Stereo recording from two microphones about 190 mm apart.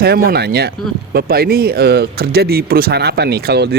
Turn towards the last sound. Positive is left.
turn(degrees=-60)  # may be behind; listen again after turning